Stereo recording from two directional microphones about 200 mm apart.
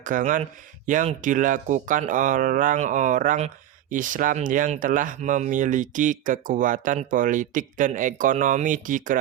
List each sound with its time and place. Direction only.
0.0 s speech: 40° right (ahead or behind)